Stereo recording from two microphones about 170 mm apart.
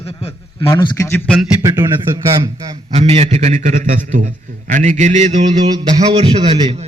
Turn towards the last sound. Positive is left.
turn(degrees=-30)  # may be behind; listen again after turning